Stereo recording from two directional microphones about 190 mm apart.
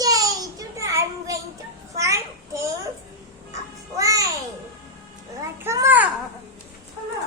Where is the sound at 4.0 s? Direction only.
15° right (ahead or behind).